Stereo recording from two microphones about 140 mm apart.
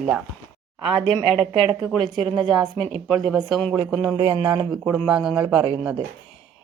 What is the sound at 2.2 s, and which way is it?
Speech, 35° right (ahead or behind).